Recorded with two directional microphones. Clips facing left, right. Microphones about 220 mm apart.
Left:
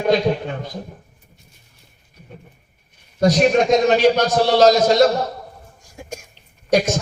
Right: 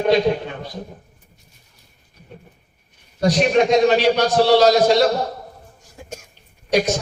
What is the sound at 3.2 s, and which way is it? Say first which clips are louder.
A man's voice: left 1 dB; 45° left (ahead or behind).